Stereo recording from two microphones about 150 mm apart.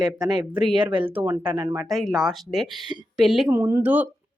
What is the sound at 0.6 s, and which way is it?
Speech, 30° right (ahead or behind).